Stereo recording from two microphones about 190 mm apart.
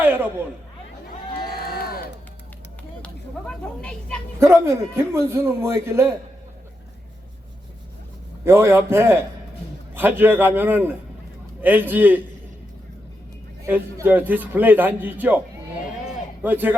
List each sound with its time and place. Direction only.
0.0 s a sound: 10° right (ahead or behind)
1.6 s crowd: 50° left (ahead or behind)
3.0 s a woman's voice: 5° left (ahead or behind)
4.4 s a man's voice: 15° right (ahead or behind)
8.4 s a man's voice: 15° right (ahead or behind)
13.7 s a man's voice: 10° right (ahead or behind)
16.4 s a man's voice: 10° right (ahead or behind)